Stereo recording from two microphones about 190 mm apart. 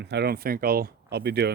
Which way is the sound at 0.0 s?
60° right (ahead or behind).